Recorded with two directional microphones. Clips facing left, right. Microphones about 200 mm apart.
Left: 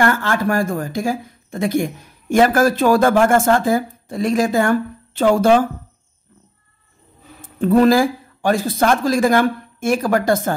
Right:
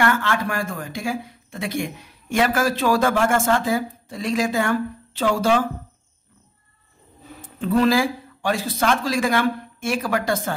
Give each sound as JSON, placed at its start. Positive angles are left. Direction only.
{"t": 0.0, "sound": "speech", "side_deg": 40}
{"t": 7.6, "sound": "speech", "side_deg": 45}